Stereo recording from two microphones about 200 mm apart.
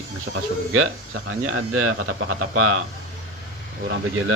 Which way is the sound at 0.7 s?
90° right.